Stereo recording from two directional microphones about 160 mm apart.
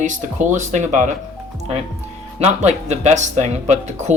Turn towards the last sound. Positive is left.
turn(degrees=-45)  # may be behind; listen again after turning